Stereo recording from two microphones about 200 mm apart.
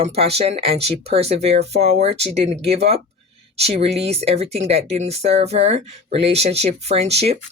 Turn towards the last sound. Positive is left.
turn(degrees=-30)  # may be behind; listen again after turning